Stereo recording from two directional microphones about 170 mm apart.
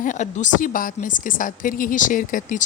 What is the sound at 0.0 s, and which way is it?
A woman's voice, 45° left (ahead or behind).